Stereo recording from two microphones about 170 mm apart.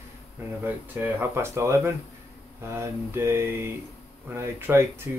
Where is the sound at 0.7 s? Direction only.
15° right (ahead or behind).